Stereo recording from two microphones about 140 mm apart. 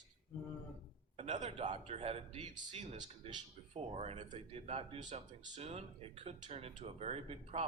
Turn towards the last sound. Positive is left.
turn(degrees=-45)  # may be behind; listen again after turning